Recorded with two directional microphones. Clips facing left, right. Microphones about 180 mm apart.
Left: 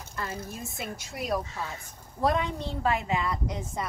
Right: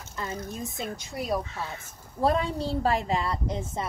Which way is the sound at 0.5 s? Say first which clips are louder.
Right 3 dB; 20° right (ahead or behind).